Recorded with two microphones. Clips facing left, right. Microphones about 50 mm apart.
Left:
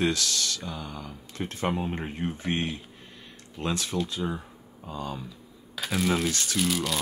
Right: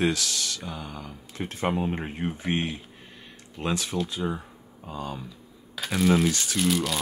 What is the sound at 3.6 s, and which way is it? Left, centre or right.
Speech, centre.